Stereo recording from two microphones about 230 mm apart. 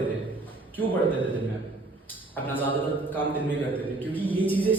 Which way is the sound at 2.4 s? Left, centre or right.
Centre.